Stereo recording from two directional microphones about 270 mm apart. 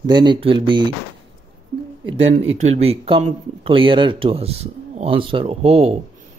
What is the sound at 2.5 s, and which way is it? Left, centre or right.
Speech, right.